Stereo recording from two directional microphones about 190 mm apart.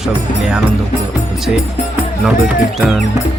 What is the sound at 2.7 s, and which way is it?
Speech, centre (ahead or behind).